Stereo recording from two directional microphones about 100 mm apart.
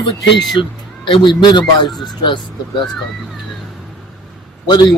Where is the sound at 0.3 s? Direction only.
Centre (ahead or behind).